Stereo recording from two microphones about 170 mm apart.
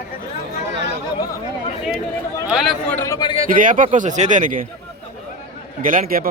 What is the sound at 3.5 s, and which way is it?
Speech, 50° right (ahead or behind).